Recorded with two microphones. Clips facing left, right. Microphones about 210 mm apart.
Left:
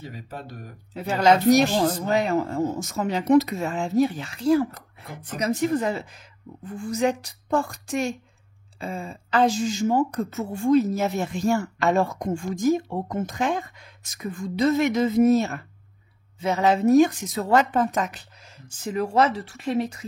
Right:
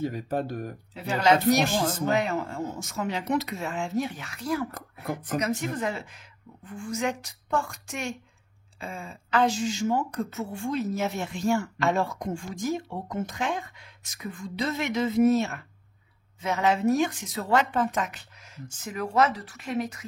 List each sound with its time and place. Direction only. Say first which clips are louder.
0.0 s speech: right 9 dB; 50° right (ahead or behind)
0.9 s a woman's voice: left 3 dB; 40° left (ahead or behind)